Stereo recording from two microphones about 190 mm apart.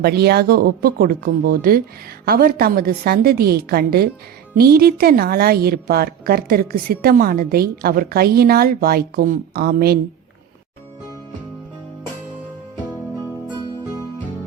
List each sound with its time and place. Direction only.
0.0 s a woman's voice: 55° right (ahead or behind)